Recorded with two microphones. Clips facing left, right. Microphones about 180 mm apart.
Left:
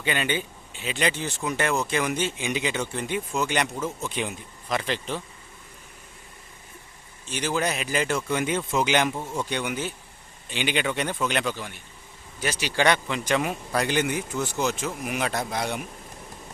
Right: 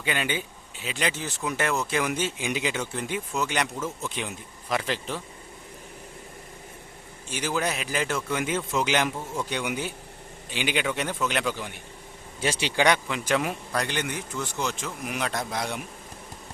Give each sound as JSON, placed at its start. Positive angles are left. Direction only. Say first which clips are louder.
{"t": 0.0, "sound": "a man's voice", "louder": "left 2 dB", "side_deg": -5}
{"t": 7.3, "sound": "a man's voice", "louder": "left 1 dB", "side_deg": -10}
{"t": 12.4, "sound": "a man's voice", "louder": "right 2 dB", "side_deg": -25}
{"t": 12.7, "sound": "a man's voice", "louder": "left 1 dB", "side_deg": -10}
{"t": 13.7, "sound": "a man's voice", "louder": "left 6 dB", "side_deg": 10}